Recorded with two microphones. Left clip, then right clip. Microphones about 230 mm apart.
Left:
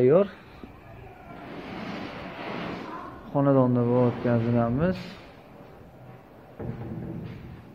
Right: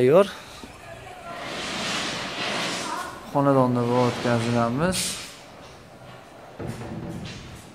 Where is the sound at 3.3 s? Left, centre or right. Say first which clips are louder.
Right 2 dB; centre.